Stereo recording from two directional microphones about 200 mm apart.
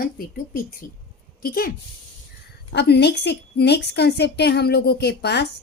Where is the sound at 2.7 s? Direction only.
55° left (ahead or behind).